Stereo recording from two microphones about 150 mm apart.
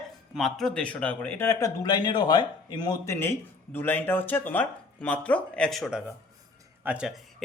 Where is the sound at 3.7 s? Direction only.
15° left (ahead or behind); by 7.2 s 5° right (ahead or behind).